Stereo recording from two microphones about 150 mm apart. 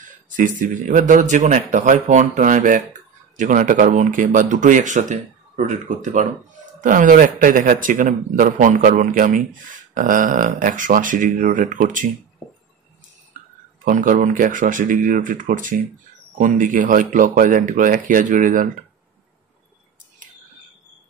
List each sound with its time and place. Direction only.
0.3 s speech: 60° right (ahead or behind)
13.8 s speech: 60° right (ahead or behind)